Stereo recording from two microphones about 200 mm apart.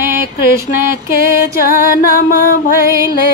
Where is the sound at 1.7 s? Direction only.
40° right (ahead or behind).